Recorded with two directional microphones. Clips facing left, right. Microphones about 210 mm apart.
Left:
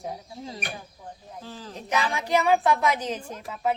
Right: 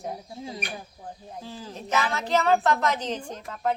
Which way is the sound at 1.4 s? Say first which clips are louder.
Even; 15° right (ahead or behind).